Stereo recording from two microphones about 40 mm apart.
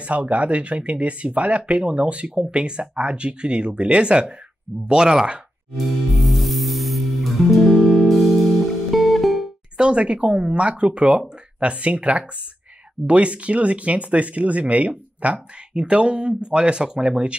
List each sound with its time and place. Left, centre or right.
0.0 s speech: right
6.1 s music: centre
9.8 s speech: right